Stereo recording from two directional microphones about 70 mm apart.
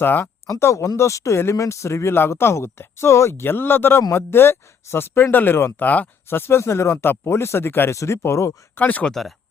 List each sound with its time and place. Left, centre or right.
0.0 s speech: left
0.6 s speech: left
8.7 s speech: left